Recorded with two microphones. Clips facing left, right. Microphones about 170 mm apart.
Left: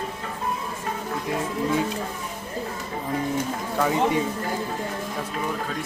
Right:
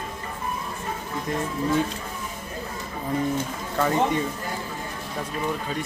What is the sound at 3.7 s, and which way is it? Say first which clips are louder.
Speech: even; 5° left (ahead or behind).